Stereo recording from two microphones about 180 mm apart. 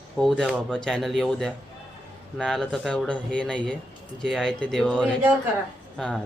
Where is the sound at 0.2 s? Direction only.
Centre (ahead or behind).